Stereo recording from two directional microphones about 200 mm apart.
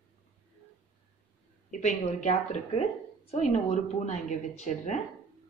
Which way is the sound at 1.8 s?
35° left (ahead or behind).